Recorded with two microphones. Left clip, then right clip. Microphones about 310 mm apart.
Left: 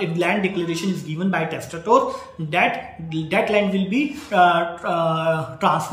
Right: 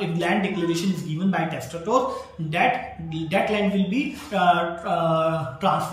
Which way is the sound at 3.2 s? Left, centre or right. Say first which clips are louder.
Left 3 dB; centre.